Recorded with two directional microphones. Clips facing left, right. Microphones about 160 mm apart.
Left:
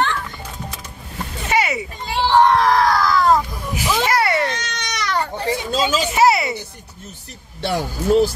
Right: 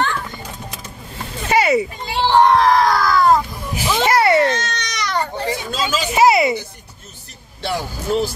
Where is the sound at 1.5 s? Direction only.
35° right (ahead or behind).